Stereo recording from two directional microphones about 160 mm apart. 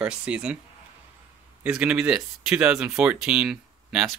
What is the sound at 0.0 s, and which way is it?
Speech, 5° right (ahead or behind).